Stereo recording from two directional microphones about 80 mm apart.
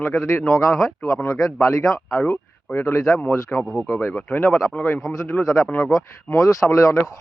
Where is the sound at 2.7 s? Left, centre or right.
Left.